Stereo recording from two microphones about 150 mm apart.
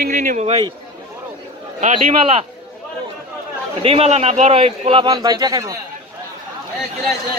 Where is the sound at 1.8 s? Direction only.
40° right (ahead or behind).